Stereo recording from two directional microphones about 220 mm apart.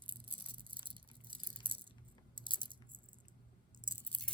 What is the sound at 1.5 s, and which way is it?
Rattle, 20° right (ahead or behind).